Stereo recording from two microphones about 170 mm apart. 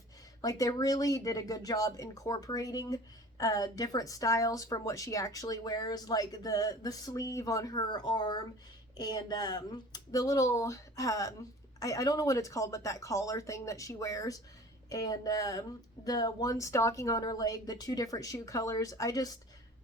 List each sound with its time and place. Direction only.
0.4 s speech: 20° left (ahead or behind)